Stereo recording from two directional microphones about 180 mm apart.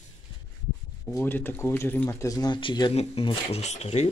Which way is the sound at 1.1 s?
15° left (ahead or behind).